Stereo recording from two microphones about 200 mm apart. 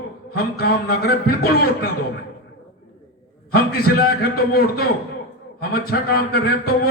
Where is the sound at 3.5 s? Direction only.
50° left (ahead or behind).